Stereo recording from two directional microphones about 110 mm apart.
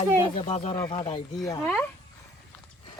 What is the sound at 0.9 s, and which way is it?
Speech, 55° left (ahead or behind).